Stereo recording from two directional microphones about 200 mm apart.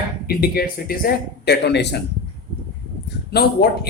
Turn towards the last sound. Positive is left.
turn(degrees=50)  # may be behind; listen again after turning